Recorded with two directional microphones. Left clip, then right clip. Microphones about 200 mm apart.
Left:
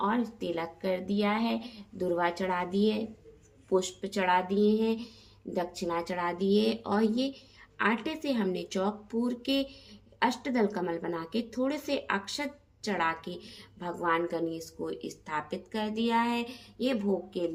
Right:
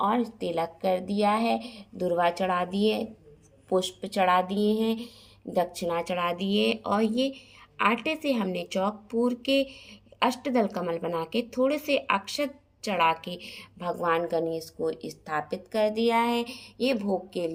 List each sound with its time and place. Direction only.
0.3 s a woman's voice: 20° right (ahead or behind)
13.0 s a woman's voice: 55° left (ahead or behind)
13.7 s a woman's voice: 20° right (ahead or behind)